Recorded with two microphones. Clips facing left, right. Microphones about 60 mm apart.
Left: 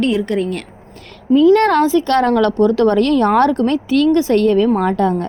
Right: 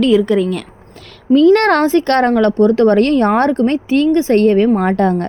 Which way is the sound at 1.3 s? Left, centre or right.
Right.